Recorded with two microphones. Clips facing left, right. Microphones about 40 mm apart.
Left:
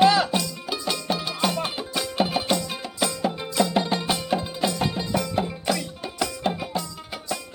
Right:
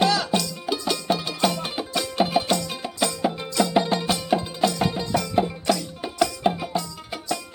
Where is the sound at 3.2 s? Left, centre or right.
Centre.